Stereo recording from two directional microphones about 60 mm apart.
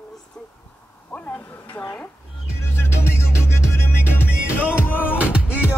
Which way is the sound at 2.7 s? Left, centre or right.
Left.